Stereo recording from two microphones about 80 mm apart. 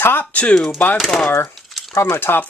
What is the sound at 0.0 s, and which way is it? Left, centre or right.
Speech, left.